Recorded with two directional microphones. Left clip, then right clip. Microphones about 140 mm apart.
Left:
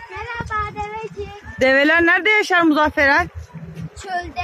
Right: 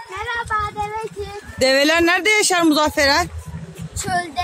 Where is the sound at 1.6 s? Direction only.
15° right (ahead or behind).